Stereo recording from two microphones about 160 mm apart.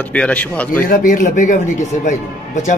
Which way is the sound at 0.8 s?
60° left (ahead or behind).